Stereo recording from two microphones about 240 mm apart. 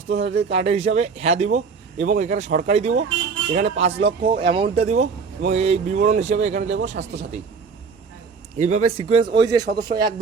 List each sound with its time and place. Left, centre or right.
0.1 s a man's voice: right
0.5 s speech: right
6.7 s a man's voice: right
8.5 s speech: right
9.7 s a man's voice: right